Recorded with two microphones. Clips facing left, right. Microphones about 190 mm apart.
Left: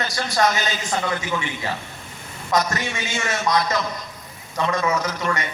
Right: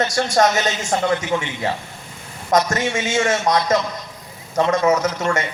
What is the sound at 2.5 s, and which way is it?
Speech, 45° right (ahead or behind).